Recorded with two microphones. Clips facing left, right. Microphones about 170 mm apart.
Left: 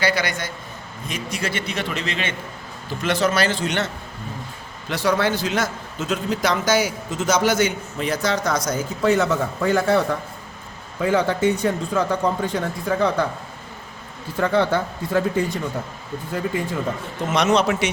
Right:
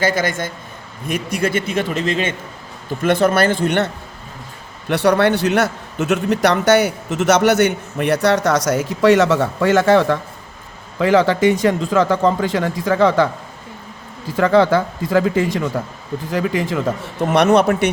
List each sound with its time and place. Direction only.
0.0 s a man's voice: 45° right (ahead or behind)
4.9 s a man's voice: 65° right (ahead or behind); by 13.2 s 90° right
14.3 s speech: 90° right
17.3 s a man's voice: 60° right (ahead or behind)